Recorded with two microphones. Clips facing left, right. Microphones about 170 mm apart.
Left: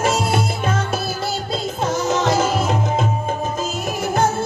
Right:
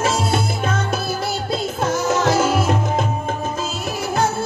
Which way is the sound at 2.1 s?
15° left (ahead or behind).